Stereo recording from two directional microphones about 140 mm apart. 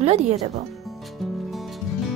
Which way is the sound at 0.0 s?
50° right (ahead or behind).